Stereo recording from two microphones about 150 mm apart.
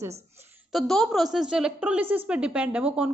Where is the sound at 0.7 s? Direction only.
Centre (ahead or behind).